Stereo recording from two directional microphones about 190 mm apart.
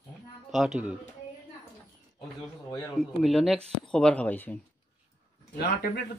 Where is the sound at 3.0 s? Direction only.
Centre (ahead or behind).